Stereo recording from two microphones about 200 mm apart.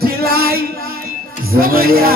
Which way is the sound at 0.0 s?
50° right (ahead or behind).